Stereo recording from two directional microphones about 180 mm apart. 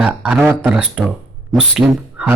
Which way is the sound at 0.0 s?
5° right (ahead or behind).